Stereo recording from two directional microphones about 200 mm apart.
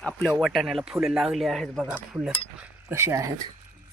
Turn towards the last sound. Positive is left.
turn(degrees=-15)  # may be behind; listen again after turning